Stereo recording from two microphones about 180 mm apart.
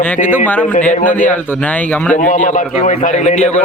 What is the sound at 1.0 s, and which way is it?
Speech, 10° left (ahead or behind).